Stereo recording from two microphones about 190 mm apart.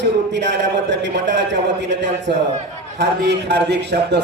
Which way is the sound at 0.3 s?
70° right (ahead or behind).